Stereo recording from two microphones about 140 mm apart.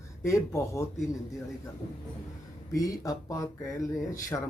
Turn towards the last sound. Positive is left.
turn(degrees=20)  # may be behind; listen again after turning